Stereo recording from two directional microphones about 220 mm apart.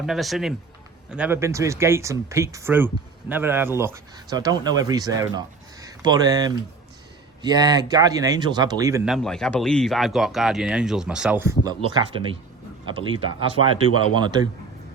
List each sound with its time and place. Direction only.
0.0 s speech: centre (ahead or behind)
9.0 s speech: centre (ahead or behind)
11.6 s speech: 20° right (ahead or behind)